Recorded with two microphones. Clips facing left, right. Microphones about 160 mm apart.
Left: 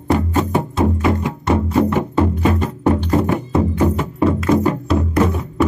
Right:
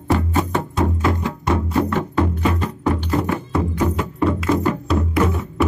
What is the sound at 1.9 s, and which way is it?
Music, 15° left (ahead or behind).